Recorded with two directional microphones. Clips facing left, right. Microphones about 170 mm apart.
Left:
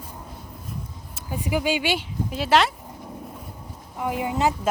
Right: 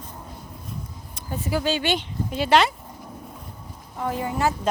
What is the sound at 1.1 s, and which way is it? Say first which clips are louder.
Speech: left 1 dB; 10° left (ahead or behind).